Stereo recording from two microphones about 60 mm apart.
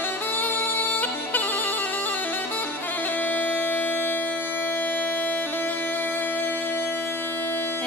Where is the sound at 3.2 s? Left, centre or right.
Left.